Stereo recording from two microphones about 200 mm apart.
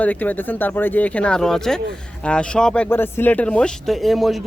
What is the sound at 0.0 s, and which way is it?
Speech, 10° left (ahead or behind).